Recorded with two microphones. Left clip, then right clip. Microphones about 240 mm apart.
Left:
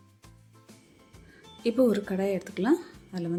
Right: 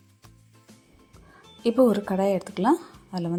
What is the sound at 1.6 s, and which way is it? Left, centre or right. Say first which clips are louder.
A woman's voice: right 4 dB; centre.